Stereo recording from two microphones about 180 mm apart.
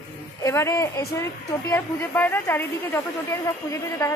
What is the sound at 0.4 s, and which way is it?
A woman's voice, 15° left (ahead or behind).